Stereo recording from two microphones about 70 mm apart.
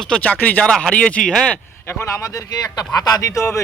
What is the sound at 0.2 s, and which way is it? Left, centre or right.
A man's voice, left.